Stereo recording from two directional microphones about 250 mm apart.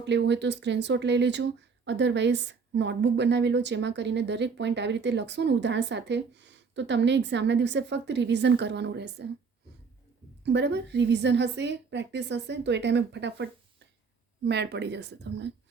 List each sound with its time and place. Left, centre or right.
0.0 s speech: right
10.4 s speech: right